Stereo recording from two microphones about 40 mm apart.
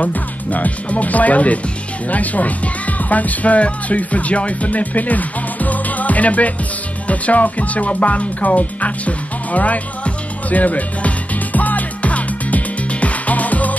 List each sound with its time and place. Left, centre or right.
0.0 s speech: left
7.1 s music: left